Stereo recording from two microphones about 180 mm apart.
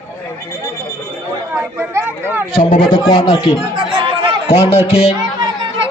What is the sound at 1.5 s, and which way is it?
Chatter, 15° right (ahead or behind).